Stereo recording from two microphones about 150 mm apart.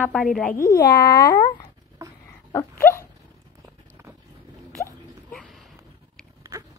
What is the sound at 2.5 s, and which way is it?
Dog, 20° left (ahead or behind).